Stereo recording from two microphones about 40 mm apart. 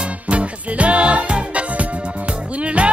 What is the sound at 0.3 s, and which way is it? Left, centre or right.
Music, right.